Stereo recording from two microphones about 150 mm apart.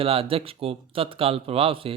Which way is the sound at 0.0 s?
40° right (ahead or behind).